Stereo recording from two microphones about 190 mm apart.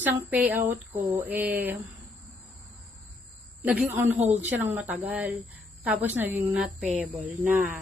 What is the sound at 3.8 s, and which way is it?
A woman's voice, 10° right (ahead or behind).